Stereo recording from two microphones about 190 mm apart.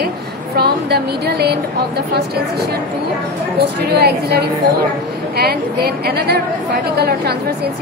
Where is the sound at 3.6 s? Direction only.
60° right (ahead or behind).